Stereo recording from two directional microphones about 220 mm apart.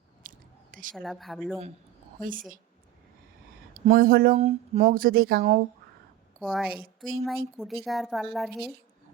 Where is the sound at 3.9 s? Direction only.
40° right (ahead or behind).